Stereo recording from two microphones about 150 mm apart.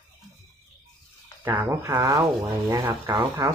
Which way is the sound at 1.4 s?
15° right (ahead or behind).